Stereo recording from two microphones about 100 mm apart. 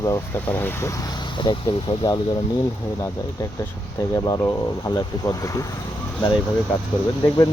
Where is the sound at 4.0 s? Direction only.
40° left (ahead or behind).